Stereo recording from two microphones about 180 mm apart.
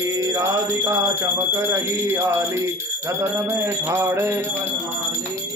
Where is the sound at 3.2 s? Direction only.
15° right (ahead or behind).